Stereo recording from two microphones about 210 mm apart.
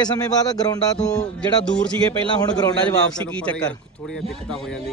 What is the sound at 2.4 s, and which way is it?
Speech, 20° left (ahead or behind).